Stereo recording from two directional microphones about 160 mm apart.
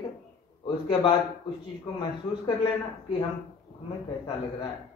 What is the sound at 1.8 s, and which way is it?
Speech, 25° left (ahead or behind).